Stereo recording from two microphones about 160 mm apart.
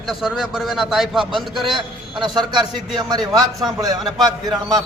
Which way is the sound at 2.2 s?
30° right (ahead or behind).